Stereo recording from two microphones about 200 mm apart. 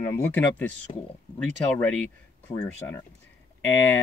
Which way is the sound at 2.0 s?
5° left (ahead or behind).